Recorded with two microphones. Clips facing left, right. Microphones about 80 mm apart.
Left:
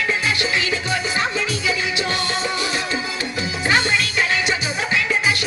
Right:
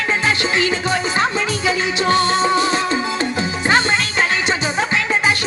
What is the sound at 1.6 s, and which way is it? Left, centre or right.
Music, right.